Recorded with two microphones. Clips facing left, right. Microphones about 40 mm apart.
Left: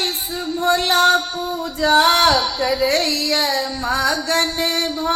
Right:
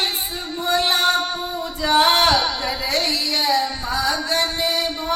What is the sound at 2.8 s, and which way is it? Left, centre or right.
Music, left.